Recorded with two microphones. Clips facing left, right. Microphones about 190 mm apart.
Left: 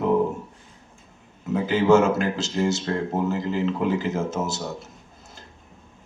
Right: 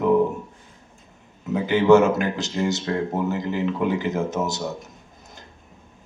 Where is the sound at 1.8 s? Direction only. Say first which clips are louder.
Right 2 dB; 20° right (ahead or behind).